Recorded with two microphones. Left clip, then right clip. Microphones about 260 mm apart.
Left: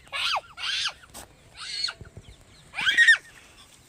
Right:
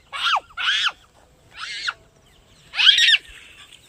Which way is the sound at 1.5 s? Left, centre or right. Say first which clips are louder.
Right 4 dB; left.